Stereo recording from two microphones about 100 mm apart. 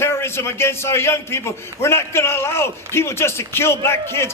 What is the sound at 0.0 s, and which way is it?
A man's voice, 25° left (ahead or behind).